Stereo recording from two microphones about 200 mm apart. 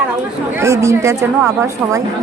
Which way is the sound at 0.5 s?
15° right (ahead or behind).